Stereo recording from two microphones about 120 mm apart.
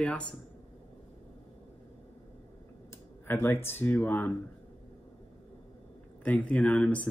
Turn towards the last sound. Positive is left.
turn(degrees=10)  # may be behind; listen again after turning